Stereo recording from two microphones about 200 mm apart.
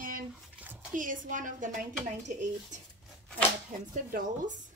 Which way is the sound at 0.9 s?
40° right (ahead or behind).